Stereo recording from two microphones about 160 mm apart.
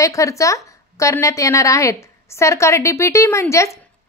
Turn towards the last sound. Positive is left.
turn(degrees=20)  # may be behind; listen again after turning